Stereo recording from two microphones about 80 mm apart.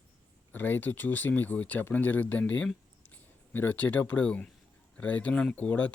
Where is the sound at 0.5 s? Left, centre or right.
Left.